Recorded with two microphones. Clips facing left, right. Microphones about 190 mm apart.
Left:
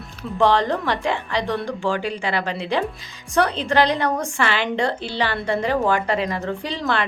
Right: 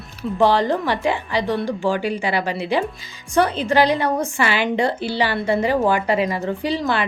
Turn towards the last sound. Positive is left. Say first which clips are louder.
# right 3 dB
turn(degrees=-5)  # may be behind; listen again after turning